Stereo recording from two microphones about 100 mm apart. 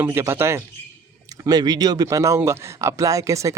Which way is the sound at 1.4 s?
40° right (ahead or behind).